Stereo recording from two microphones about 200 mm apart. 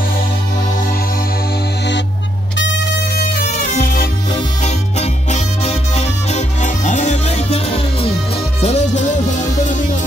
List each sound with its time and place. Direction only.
2.5 s music: 65° left (ahead or behind)
3.5 s music: 45° left (ahead or behind)
4.6 s music: 35° left (ahead or behind)